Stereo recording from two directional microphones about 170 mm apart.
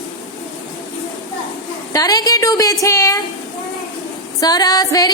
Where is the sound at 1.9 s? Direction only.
20° left (ahead or behind).